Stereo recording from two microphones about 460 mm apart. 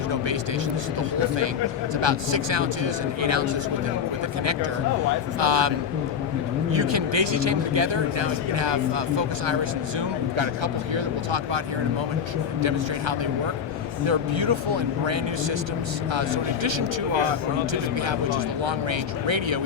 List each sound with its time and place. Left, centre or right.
2.0 s a man's voice: right
5.4 s speech: right
6.7 s a man's voice: right
14.1 s a man's voice: right